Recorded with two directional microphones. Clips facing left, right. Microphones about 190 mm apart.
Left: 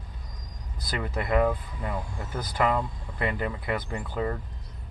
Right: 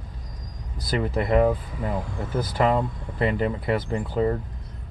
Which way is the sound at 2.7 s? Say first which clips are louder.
Right 5 dB; 25° right (ahead or behind).